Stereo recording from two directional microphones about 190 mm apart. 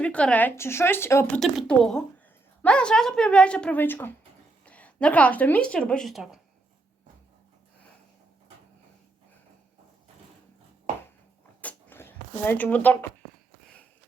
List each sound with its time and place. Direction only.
0.0 s speech: 5° left (ahead or behind)
1.4 s a woman's voice: centre (ahead or behind)
11.6 s a sound: 10° left (ahead or behind)